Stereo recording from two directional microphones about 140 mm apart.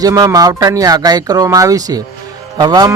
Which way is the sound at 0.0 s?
25° right (ahead or behind).